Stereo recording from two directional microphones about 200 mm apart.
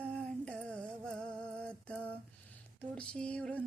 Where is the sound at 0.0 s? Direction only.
5° left (ahead or behind).